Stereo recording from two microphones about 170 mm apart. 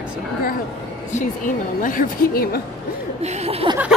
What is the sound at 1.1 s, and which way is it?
A woman's voice, 50° left (ahead or behind).